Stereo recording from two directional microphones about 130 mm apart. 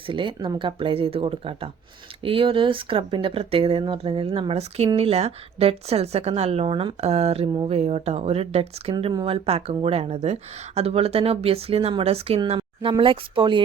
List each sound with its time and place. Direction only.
0.1 s speech: 40° right (ahead or behind)
12.5 s a sound: 40° right (ahead or behind)
13.0 s speech: 40° right (ahead or behind)